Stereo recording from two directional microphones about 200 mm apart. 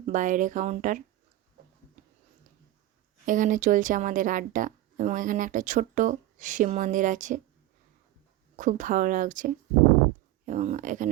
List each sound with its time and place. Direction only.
0.0 s speech: 40° right (ahead or behind)
3.2 s speech: 40° right (ahead or behind)
8.5 s speech: 40° right (ahead or behind)